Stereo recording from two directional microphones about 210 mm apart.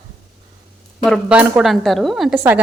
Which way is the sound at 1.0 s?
Centre (ahead or behind).